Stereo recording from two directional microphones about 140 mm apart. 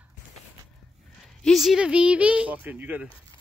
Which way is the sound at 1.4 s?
Centre (ahead or behind).